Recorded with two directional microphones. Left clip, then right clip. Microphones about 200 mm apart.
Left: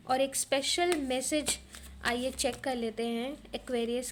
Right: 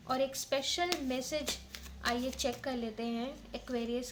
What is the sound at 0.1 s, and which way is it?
Speech, 40° left (ahead or behind).